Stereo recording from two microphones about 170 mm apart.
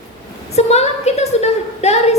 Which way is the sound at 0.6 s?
40° left (ahead or behind).